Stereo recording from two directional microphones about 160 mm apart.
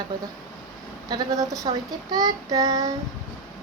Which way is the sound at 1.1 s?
25° right (ahead or behind).